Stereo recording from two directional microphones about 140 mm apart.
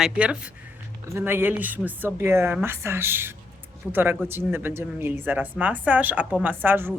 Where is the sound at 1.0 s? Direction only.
20° right (ahead or behind).